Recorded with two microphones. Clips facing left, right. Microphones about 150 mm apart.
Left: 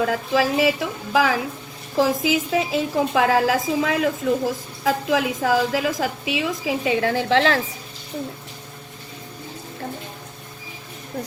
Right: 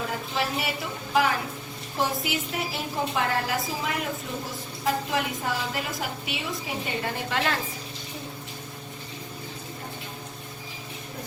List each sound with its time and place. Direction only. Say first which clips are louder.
0.0 s a woman's voice: left 9 dB; 90° left